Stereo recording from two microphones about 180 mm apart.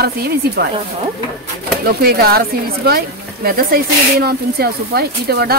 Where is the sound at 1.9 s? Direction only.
60° right (ahead or behind).